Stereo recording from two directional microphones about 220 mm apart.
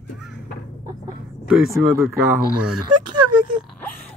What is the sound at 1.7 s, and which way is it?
Speech, 10° right (ahead or behind).